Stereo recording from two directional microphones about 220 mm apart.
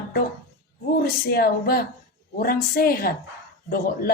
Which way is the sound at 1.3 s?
45° left (ahead or behind).